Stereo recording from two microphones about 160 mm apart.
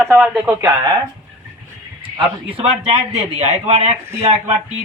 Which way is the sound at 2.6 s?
40° right (ahead or behind).